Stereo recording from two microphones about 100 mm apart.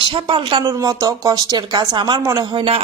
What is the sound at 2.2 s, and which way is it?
Speech, 30° right (ahead or behind).